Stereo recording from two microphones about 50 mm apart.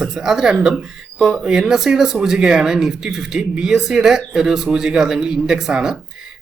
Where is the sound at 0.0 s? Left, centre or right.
Centre.